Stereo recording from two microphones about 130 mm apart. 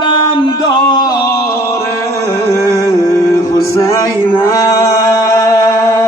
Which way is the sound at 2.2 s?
25° left (ahead or behind).